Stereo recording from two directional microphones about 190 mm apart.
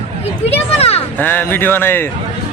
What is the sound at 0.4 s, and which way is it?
Speech, 30° left (ahead or behind).